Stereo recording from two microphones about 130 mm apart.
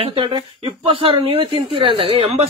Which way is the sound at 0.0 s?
40° right (ahead or behind).